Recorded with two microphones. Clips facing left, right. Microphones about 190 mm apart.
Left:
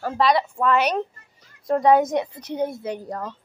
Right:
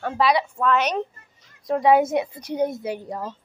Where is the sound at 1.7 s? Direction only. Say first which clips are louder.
Even; 5° right (ahead or behind).